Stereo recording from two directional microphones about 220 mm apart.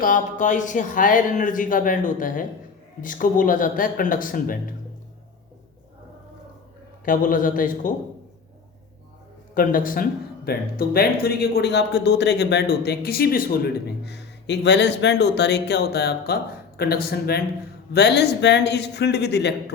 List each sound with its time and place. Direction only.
0.0 s speech: 35° left (ahead or behind)
7.0 s speech: 40° left (ahead or behind)
9.6 s speech: 40° left (ahead or behind)